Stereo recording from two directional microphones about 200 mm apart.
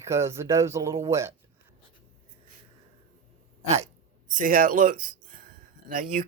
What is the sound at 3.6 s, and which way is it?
Speech, 35° right (ahead or behind).